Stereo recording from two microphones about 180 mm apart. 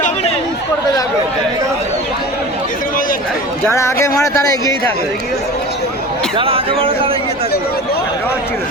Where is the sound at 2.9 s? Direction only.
50° left (ahead or behind).